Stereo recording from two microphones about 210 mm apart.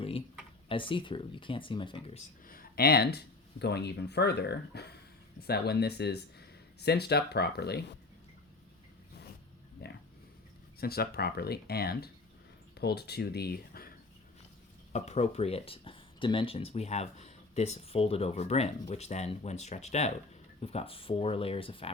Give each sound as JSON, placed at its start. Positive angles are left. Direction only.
{"t": 0.0, "sound": "a sound", "side_deg": 25}
{"t": 0.7, "sound": "speech", "side_deg": 25}
{"t": 2.5, "sound": "speech", "side_deg": 45}
{"t": 9.8, "sound": "a sound", "side_deg": 50}
{"t": 10.8, "sound": "speech", "side_deg": 45}
{"t": 14.9, "sound": "speech", "side_deg": 30}